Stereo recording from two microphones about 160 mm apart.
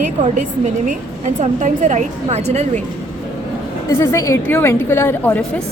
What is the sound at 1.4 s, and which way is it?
A woman's voice, 50° right (ahead or behind).